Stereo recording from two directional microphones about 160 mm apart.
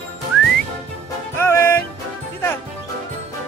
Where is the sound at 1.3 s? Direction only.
15° left (ahead or behind).